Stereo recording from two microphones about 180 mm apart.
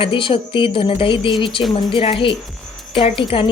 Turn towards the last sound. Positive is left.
turn(degrees=30)  # may be behind; listen again after turning